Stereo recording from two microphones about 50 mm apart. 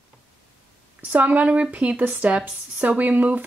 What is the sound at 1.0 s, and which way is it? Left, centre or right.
Speech, right.